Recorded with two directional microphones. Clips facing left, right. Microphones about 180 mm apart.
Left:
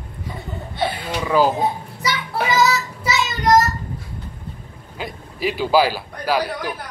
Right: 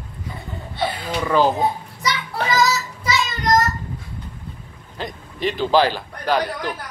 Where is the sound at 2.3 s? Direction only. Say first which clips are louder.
Left 2 dB; 5° left (ahead or behind).